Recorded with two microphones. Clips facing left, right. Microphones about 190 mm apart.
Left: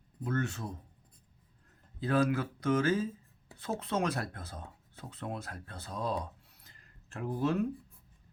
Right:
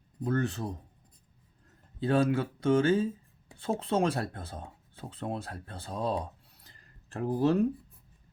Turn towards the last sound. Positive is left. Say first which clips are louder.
# right 5 dB
turn(degrees=-35)  # may be behind; listen again after turning